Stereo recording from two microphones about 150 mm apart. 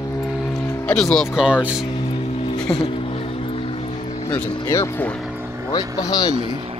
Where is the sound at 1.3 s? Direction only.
5° right (ahead or behind).